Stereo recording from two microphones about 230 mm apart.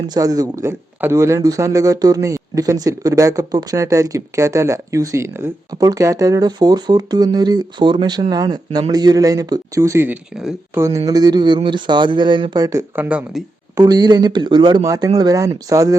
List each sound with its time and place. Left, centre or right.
0.1 s speech: centre
11.0 s speech: centre
13.8 s speech: centre